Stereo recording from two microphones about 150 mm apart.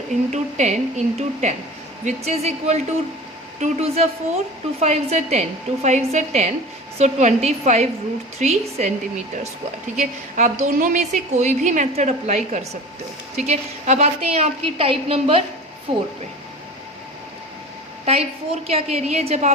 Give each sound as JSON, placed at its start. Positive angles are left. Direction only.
{"t": 0.3, "sound": "a woman's voice", "side_deg": -50}
{"t": 10.0, "sound": "a woman's voice", "side_deg": -50}
{"t": 18.0, "sound": "a woman's voice", "side_deg": -40}